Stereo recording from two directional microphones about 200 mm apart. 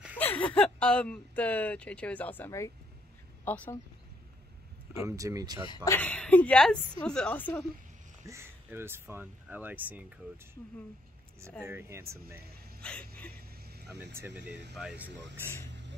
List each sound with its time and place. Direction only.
0.2 s speech: 10° left (ahead or behind)
4.9 s speech: 15° right (ahead or behind)
5.9 s a woman's voice: 10° left (ahead or behind)
8.3 s speech: 10° right (ahead or behind)
11.6 s speech: 10° right (ahead or behind)
12.8 s a sound: 5° left (ahead or behind)
14.1 s a woman's voice: 10° right (ahead or behind)